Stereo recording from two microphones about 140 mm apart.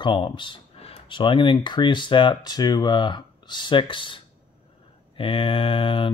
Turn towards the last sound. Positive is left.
turn(degrees=40)  # may be behind; listen again after turning